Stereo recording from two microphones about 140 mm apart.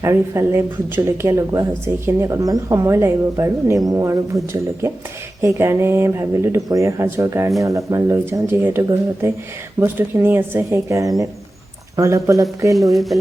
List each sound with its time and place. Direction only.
0.0 s speech: 20° right (ahead or behind)
9.8 s speech: 15° right (ahead or behind)
12.7 s speech: centre (ahead or behind)